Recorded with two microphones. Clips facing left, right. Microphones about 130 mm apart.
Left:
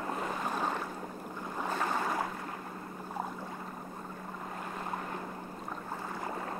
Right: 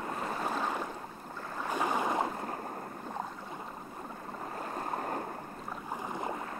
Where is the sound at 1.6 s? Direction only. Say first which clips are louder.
Right 2 dB; 15° right (ahead or behind).